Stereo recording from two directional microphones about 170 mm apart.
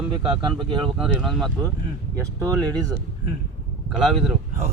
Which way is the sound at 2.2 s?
20° right (ahead or behind).